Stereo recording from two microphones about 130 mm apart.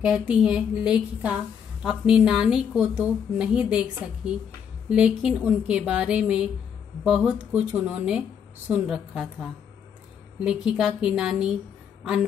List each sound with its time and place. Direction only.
0.0 s a woman's voice: 5° right (ahead or behind)
4.8 s a woman's voice: 10° right (ahead or behind)